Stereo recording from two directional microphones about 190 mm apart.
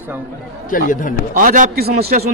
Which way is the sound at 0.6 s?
45° left (ahead or behind).